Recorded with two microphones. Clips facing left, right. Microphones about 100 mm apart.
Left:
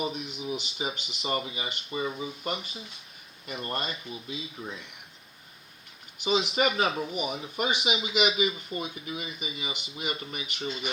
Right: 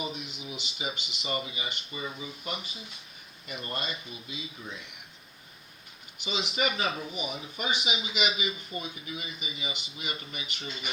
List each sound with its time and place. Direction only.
0.0 s speech: 45° left (ahead or behind)
4.6 s speech: 50° left (ahead or behind)
6.2 s speech: 45° left (ahead or behind)